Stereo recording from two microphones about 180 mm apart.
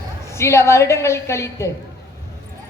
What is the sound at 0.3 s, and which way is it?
A man's voice, 15° left (ahead or behind).